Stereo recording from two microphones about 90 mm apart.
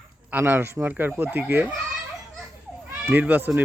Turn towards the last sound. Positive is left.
turn(degrees=-20)  # may be behind; listen again after turning